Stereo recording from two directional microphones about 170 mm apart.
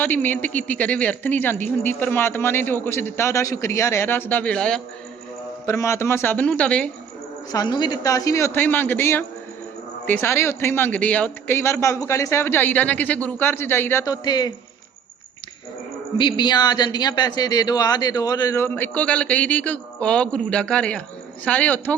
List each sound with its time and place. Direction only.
0.0 s a woman's voice: 10° left (ahead or behind)
5.6 s a woman's voice: 15° left (ahead or behind)
7.5 s a woman's voice: 25° left (ahead or behind)
16.1 s a woman's voice: 25° left (ahead or behind); by 21.9 s 10° left (ahead or behind)